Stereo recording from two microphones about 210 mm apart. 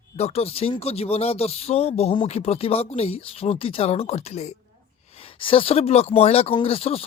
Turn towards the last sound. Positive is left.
turn(degrees=25)  # may be behind; listen again after turning